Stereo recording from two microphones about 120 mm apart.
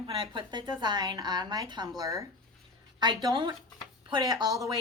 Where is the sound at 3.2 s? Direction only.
45° right (ahead or behind).